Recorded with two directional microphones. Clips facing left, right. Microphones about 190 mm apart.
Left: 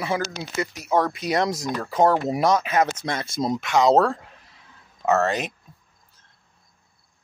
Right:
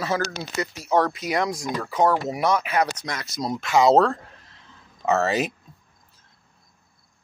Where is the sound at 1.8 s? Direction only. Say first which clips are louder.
Left 2 dB; 35° left (ahead or behind).